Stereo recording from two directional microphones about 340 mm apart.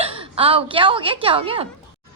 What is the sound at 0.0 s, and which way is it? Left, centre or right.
A woman's voice, centre.